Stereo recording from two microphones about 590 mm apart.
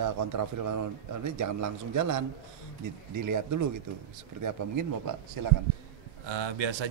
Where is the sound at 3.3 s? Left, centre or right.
Right.